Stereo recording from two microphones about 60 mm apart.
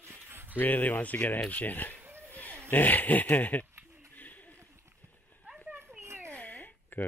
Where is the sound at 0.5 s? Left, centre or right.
Left.